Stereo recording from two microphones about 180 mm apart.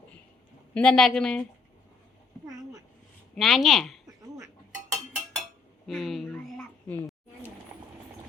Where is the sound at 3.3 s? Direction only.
Centre (ahead or behind).